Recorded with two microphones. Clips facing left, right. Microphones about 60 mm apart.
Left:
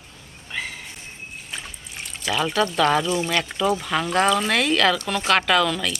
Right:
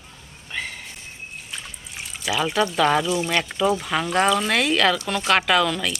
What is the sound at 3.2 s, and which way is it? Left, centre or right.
A woman's voice, centre.